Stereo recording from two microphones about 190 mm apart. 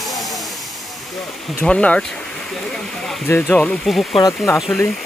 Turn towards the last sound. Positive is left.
turn(degrees=5)  # may be behind; listen again after turning